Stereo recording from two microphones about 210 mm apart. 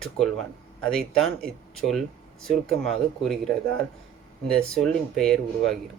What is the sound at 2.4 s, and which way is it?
Speech, centre (ahead or behind).